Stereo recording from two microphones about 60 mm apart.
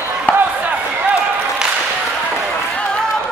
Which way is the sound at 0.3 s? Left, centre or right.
Left.